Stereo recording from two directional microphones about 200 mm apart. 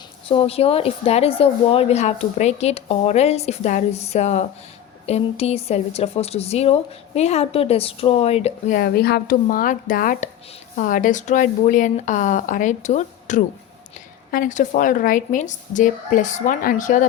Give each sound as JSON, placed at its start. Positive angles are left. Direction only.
{"t": 0.3, "sound": "a woman's voice", "side_deg": 30}